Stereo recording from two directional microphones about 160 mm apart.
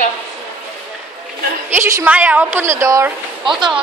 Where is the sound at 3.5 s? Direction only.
Centre (ahead or behind).